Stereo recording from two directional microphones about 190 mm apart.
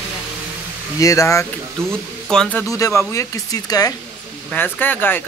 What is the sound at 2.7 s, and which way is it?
Speech, 15° left (ahead or behind).